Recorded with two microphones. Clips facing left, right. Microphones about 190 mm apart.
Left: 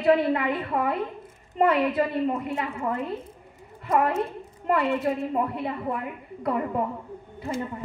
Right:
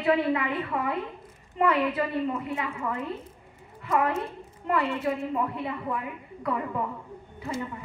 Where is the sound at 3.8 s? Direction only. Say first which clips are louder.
Left 3 dB; 45° left (ahead or behind).